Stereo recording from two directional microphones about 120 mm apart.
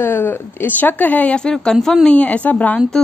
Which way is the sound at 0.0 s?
20° left (ahead or behind).